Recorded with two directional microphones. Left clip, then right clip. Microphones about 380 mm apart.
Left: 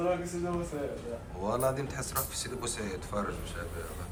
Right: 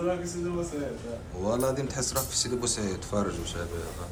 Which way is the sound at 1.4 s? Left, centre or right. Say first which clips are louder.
Right 3 dB; centre.